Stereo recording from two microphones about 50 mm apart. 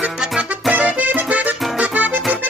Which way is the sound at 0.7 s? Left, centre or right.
Right.